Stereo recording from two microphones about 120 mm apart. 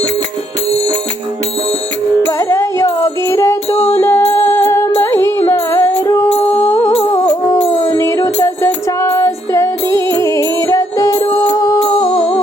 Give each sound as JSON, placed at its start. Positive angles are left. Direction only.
{"t": 2.4, "sound": "music", "side_deg": 25}